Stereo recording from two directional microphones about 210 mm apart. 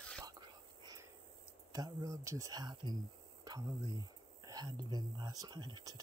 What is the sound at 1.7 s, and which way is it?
Speech, 20° right (ahead or behind).